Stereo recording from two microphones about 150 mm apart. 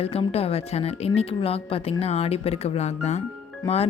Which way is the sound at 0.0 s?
40° left (ahead or behind).